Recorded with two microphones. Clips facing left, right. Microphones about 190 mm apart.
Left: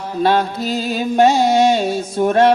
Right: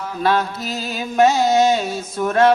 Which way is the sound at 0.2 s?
30° left (ahead or behind).